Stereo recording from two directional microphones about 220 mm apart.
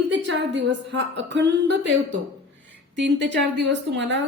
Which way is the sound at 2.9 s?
55° right (ahead or behind).